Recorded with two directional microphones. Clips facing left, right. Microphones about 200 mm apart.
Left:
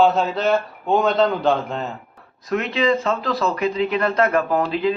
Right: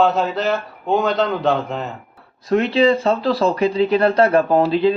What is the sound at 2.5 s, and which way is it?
Speech, 30° right (ahead or behind).